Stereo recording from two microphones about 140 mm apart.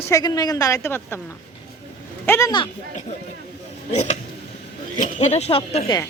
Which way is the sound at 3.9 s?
55° left (ahead or behind).